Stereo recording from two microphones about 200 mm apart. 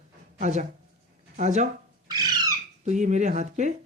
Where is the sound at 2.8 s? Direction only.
35° right (ahead or behind).